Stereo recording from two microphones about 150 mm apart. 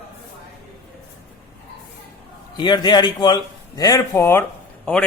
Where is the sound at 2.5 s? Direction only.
30° left (ahead or behind).